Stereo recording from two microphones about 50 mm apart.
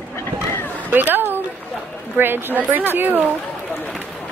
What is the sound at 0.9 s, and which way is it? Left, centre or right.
Speech, right.